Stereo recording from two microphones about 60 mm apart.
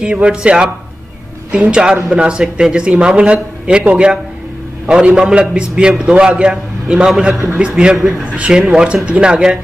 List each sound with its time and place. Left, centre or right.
0.0 s a man's voice: centre